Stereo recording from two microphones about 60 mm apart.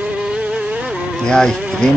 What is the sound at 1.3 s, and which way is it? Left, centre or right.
Speech, centre.